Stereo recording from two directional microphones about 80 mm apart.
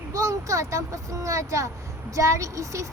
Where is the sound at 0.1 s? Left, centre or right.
Right.